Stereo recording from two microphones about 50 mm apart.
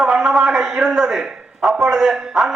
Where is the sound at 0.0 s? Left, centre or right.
Centre.